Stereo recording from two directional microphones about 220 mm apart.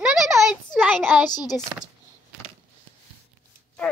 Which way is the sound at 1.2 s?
20° left (ahead or behind).